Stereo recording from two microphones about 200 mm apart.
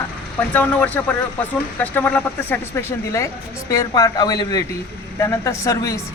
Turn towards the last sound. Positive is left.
turn(degrees=15)  # may be behind; listen again after turning